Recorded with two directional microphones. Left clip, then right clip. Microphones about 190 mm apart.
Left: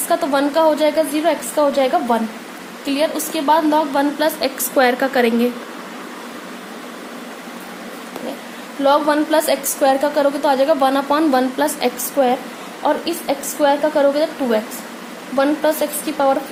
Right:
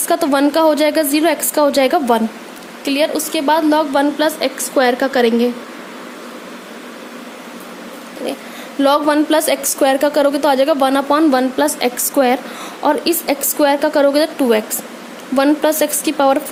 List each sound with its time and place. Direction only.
0.1 s a woman's voice: 45° right (ahead or behind)
2.8 s a woman's voice: 45° right (ahead or behind)
4.2 s a woman's voice: 25° right (ahead or behind)
8.8 s a woman's voice: 50° right (ahead or behind); by 11.9 s 30° right (ahead or behind)
12.2 s a woman's voice: 50° right (ahead or behind)